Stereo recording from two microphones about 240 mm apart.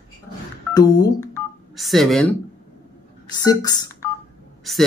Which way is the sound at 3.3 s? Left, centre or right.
Centre.